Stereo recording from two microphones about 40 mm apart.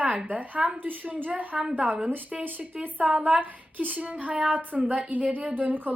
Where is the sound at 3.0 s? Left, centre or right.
Right.